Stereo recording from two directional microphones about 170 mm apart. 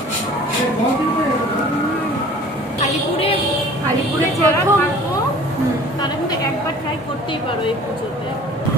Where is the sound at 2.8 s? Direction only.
35° left (ahead or behind).